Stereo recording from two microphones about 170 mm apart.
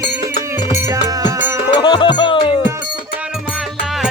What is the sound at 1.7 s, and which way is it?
Music, 30° left (ahead or behind).